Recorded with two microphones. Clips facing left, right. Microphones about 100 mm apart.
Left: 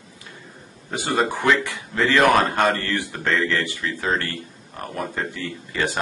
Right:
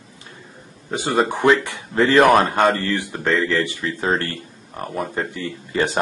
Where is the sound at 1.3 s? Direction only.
20° right (ahead or behind).